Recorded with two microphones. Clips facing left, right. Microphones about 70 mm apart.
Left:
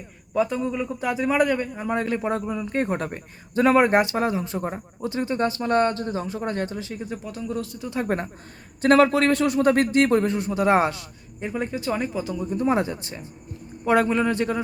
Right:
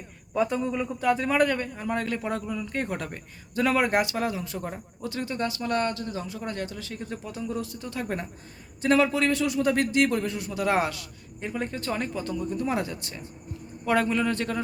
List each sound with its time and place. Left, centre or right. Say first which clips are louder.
0.3 s a man's voice: left 2 dB; centre; by 6.9 s left
6.9 s speech: left 3 dB; centre
7.3 s a man's voice: left 1 dB; centre
8.0 s a man's voice: left 6 dB; left
11.3 s speech: left 4 dB; centre
12.5 s a man's voice: left 8 dB; left